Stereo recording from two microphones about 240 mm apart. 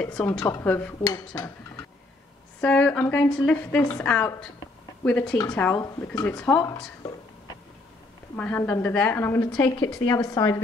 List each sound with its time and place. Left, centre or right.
0.0 s a woman's voice: centre
1.3 s dishes: centre
2.6 s a woman's voice: centre
8.4 s a woman's voice: centre